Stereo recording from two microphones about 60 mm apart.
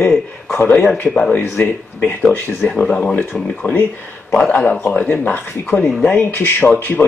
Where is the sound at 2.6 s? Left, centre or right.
Centre.